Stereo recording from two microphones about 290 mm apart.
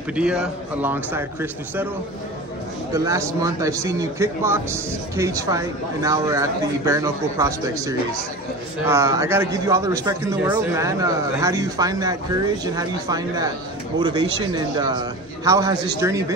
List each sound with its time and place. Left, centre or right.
0.1 s a man's voice: centre
2.9 s speech: centre